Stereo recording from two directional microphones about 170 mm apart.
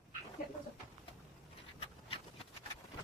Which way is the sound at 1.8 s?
30° left (ahead or behind).